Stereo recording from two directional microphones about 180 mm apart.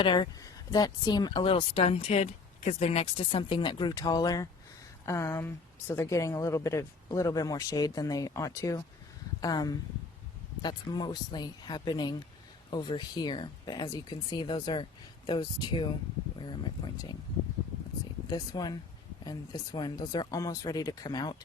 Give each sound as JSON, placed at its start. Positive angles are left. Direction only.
{"t": 0.0, "sound": "speech", "side_deg": 25}
{"t": 18.3, "sound": "speech", "side_deg": 20}